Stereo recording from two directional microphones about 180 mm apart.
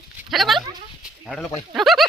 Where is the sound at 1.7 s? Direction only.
Centre (ahead or behind).